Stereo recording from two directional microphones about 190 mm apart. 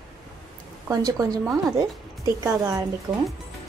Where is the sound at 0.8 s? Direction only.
20° right (ahead or behind).